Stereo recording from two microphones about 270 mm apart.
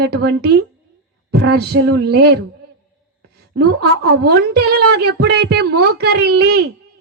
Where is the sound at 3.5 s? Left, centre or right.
Right.